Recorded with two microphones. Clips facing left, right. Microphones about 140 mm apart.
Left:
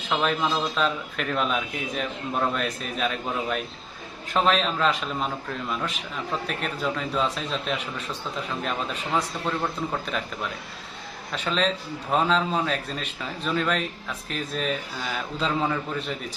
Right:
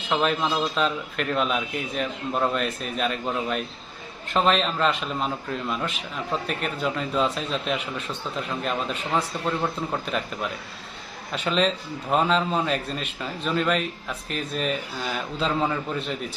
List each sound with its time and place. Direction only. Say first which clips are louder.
0.1 s a man's voice: right 1 dB; centre (ahead or behind)
11.3 s a man's voice: right 2 dB; 5° right (ahead or behind)